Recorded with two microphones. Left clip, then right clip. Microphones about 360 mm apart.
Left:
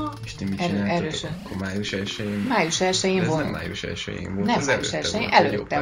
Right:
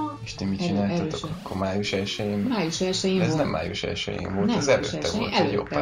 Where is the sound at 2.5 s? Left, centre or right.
Centre.